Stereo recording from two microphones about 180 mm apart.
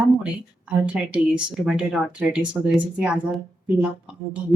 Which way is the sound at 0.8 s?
5° right (ahead or behind).